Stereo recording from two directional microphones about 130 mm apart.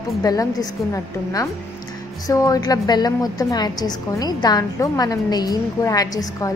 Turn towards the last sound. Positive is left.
turn(degrees=30)  # may be behind; listen again after turning